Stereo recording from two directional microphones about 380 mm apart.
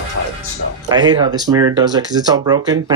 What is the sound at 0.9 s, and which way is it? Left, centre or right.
Speech, centre.